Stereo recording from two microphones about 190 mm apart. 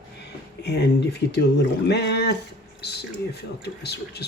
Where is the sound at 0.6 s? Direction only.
65° left (ahead or behind).